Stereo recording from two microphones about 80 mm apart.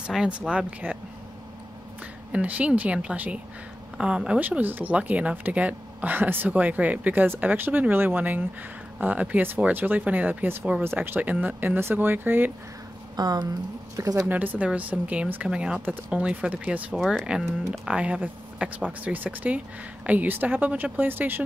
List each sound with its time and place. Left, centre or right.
0.0 s speech: centre
2.3 s speech: centre
4.4 s speech: right
13.1 s speech: right
13.9 s speech: right
14.2 s speech: right
16.9 s speech: centre; by 21.4 s right